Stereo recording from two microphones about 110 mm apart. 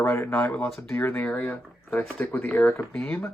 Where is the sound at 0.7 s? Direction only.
Centre (ahead or behind).